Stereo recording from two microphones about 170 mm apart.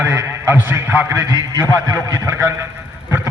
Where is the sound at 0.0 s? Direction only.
15° right (ahead or behind).